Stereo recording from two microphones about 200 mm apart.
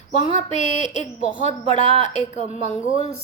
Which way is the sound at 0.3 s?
35° left (ahead or behind).